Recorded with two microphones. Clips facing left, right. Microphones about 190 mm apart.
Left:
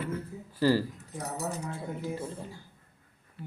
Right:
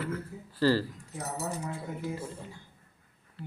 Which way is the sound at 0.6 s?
15° left (ahead or behind).